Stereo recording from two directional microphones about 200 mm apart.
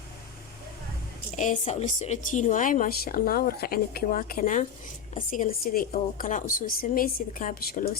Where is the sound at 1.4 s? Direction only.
35° left (ahead or behind).